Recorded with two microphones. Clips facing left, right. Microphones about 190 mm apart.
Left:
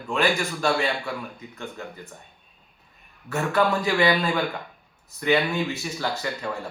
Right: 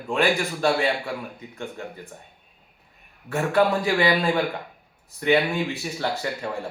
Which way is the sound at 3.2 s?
30° right (ahead or behind).